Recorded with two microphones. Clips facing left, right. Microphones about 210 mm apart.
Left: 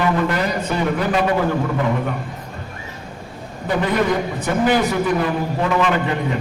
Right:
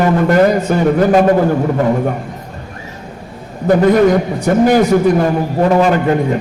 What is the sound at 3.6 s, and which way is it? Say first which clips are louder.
A man's voice: right 9 dB; 45° right (ahead or behind).